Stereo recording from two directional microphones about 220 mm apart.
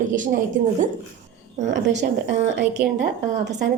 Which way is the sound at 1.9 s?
30° right (ahead or behind).